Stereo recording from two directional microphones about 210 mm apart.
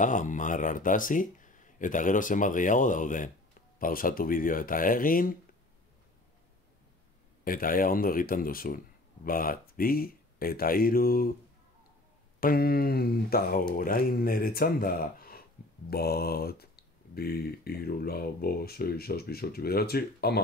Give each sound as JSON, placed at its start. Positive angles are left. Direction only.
{"t": 0.0, "sound": "speech", "side_deg": 35}
{"t": 7.4, "sound": "speech", "side_deg": 40}
{"t": 12.4, "sound": "speech", "side_deg": 45}